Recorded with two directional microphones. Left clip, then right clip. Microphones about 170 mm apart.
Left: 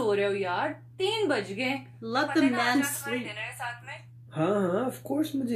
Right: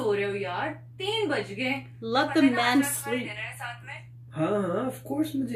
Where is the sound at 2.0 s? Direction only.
10° right (ahead or behind).